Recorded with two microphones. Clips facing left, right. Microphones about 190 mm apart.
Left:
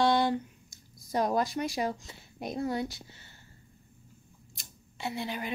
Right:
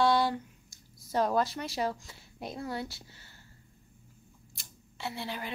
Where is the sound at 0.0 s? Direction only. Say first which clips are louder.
Left 1 dB; 20° left (ahead or behind).